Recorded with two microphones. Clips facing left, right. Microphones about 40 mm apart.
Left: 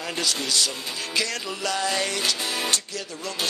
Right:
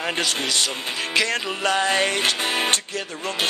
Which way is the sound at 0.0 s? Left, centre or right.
Right.